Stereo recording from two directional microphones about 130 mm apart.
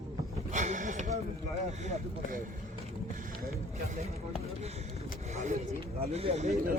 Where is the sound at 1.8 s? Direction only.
65° right (ahead or behind).